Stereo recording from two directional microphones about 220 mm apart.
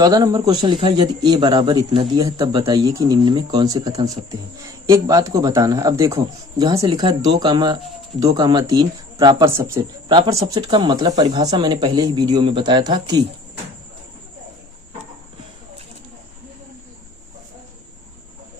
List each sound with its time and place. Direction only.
0.0 s speech: 20° right (ahead or behind)